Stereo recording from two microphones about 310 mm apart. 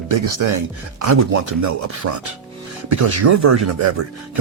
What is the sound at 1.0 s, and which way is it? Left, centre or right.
Speech, right.